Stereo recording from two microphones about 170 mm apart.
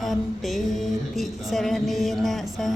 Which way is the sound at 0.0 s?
Centre (ahead or behind).